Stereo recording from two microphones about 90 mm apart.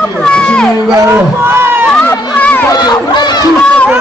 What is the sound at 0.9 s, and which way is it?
Crowd, 25° right (ahead or behind).